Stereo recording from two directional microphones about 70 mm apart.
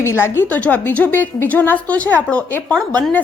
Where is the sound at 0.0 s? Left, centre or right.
Left.